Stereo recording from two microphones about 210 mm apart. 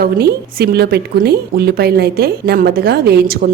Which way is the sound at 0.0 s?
50° right (ahead or behind).